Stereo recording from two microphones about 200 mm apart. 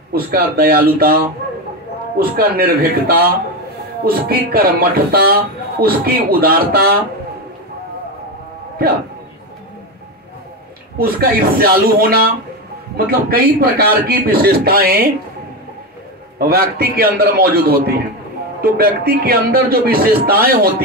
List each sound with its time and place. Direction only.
0.1 s speech: 50° right (ahead or behind)
11.0 s speech: 50° right (ahead or behind)
16.3 s speech: 50° right (ahead or behind)